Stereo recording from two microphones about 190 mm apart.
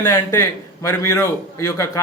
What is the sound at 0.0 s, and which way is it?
A man's voice, 15° left (ahead or behind).